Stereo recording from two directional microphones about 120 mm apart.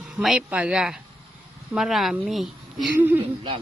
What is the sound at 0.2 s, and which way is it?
A woman's voice, 5° right (ahead or behind).